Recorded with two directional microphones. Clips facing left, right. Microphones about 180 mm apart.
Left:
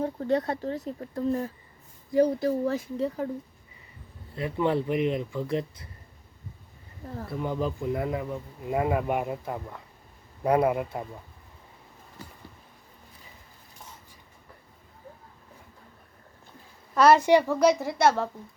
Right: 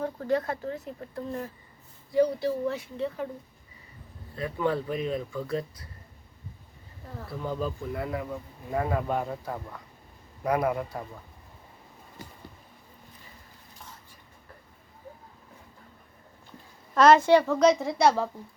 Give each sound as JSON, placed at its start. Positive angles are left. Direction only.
{"t": 0.0, "sound": "speech", "side_deg": 25}
{"t": 2.1, "sound": "speech", "side_deg": 45}
{"t": 4.4, "sound": "speech", "side_deg": 25}
{"t": 7.3, "sound": "speech", "side_deg": 20}
{"t": 16.9, "sound": "a woman's voice", "side_deg": 5}